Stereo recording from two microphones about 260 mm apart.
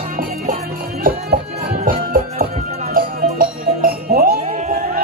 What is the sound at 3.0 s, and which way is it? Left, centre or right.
Music, right.